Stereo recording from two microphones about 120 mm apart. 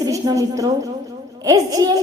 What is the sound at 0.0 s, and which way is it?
A woman's voice, 30° right (ahead or behind).